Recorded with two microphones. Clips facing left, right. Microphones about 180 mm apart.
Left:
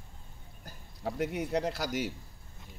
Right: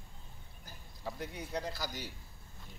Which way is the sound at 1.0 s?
80° left.